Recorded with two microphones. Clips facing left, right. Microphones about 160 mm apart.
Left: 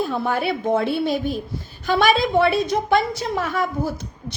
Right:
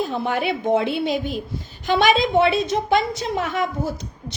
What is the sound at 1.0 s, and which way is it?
Speech, 50° left (ahead or behind).